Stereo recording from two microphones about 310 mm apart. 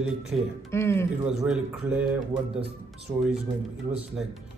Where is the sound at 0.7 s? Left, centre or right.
Centre.